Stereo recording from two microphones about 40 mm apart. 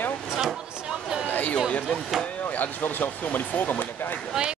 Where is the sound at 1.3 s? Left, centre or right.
Left.